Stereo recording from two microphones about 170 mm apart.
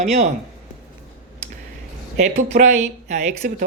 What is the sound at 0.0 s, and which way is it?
Speech, 40° right (ahead or behind).